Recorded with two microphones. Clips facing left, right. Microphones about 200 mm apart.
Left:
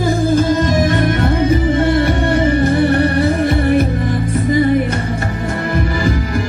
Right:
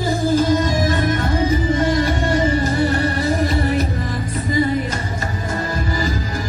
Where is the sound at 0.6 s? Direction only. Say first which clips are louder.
Left 4 dB; 70° left (ahead or behind).